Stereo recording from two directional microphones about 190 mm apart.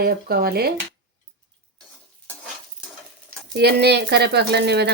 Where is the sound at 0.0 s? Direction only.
55° right (ahead or behind).